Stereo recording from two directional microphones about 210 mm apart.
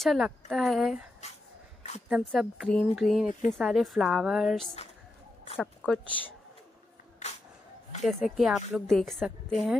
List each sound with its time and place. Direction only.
0.0 s speech: centre (ahead or behind)
2.0 s speech: centre (ahead or behind)
7.2 s a sound: 35° left (ahead or behind)
8.4 s speech: centre (ahead or behind)